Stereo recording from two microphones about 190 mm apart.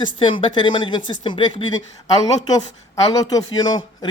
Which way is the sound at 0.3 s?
25° left (ahead or behind).